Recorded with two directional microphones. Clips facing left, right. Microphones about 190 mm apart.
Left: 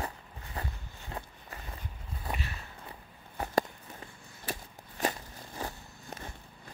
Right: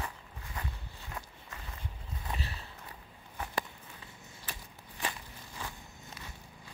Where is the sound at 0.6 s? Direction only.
35° left (ahead or behind).